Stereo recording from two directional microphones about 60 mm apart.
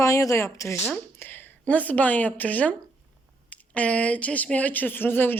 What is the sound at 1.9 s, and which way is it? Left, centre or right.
Speech, left.